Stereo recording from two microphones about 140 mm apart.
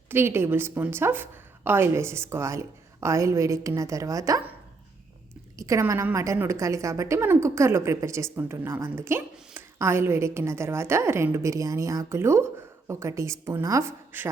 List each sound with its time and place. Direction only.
0.1 s a woman's voice: 15° right (ahead or behind)
5.5 s a woman's voice: 20° right (ahead or behind)